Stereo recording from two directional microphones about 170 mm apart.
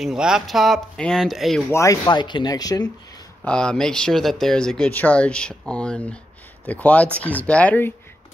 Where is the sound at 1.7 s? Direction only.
20° left (ahead or behind).